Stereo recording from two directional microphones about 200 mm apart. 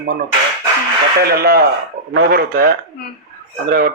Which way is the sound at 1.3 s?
50° right (ahead or behind).